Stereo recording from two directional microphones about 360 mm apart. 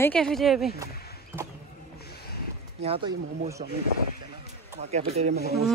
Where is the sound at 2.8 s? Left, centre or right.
Centre.